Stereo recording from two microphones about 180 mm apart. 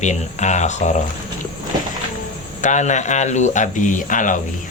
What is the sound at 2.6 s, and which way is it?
Speech, 40° left (ahead or behind).